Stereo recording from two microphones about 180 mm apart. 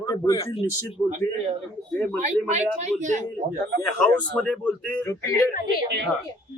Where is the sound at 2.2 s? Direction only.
40° right (ahead or behind).